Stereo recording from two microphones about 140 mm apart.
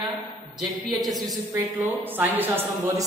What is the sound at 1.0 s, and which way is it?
Speech, centre (ahead or behind).